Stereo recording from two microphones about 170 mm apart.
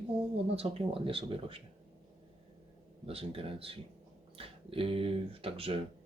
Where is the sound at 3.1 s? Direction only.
35° right (ahead or behind).